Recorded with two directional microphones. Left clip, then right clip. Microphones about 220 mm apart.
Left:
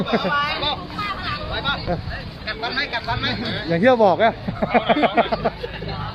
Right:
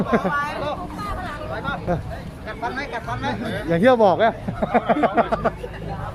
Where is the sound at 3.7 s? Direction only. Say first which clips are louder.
Even; centre (ahead or behind).